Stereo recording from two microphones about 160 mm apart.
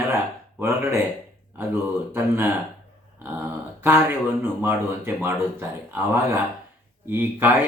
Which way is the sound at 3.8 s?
15° right (ahead or behind).